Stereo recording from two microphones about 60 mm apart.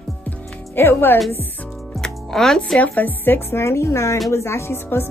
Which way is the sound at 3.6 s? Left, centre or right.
Left.